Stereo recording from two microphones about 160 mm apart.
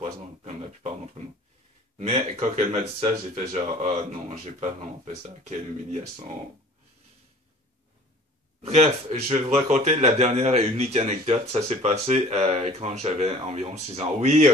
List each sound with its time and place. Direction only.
0.0 s a sound: 40° right (ahead or behind)
2.0 s speech: 40° right (ahead or behind)
8.6 s speech: 40° right (ahead or behind)